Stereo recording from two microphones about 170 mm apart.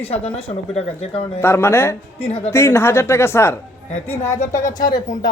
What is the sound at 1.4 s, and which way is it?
Speech, 15° left (ahead or behind).